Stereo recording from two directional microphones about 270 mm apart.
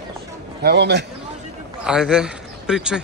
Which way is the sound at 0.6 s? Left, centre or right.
Right.